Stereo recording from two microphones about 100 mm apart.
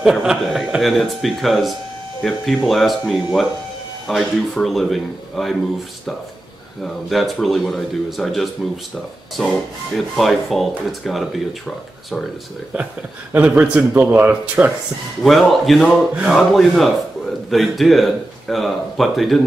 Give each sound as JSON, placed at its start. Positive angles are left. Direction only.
{"t": 0.0, "sound": "speech", "side_deg": -5}
{"t": 6.8, "sound": "speech", "side_deg": 0}
{"t": 9.9, "sound": "speech", "side_deg": 0}
{"t": 12.7, "sound": "speech", "side_deg": -15}
{"t": 15.2, "sound": "speech", "side_deg": 0}